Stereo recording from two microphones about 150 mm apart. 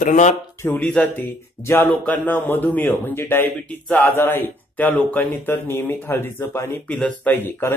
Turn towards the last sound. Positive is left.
turn(degrees=15)  # may be behind; listen again after turning